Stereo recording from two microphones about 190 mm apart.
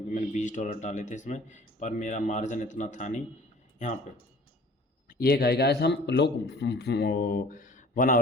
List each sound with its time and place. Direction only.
0.1 s speech: 40° left (ahead or behind)
5.0 s speech: 50° left (ahead or behind)